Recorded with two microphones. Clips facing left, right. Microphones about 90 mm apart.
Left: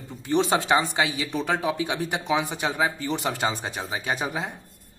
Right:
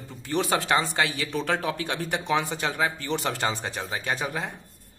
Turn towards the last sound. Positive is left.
turn(degrees=15)  # may be behind; listen again after turning